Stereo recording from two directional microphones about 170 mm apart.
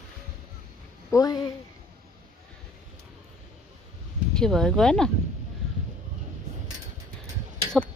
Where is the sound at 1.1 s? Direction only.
20° left (ahead or behind).